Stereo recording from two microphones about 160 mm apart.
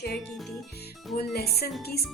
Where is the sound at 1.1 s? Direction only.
85° left.